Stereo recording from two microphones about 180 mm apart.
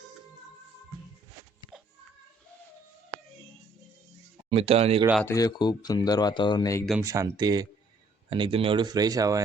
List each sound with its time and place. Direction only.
1.7 s music: 5° right (ahead or behind)
4.4 s speech: 35° right (ahead or behind)
5.2 s speech: 20° left (ahead or behind)
7.0 s speech: 20° right (ahead or behind)